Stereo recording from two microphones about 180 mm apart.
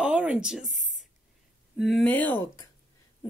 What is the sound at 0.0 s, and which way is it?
A woman's voice, 5° right (ahead or behind).